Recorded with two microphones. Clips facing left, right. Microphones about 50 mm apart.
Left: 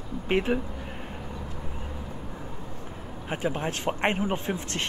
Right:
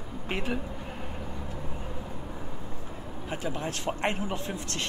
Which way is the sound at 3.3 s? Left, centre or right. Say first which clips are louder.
Left 4 dB; left.